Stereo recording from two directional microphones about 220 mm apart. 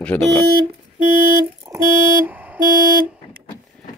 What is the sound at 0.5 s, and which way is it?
Music, 40° right (ahead or behind).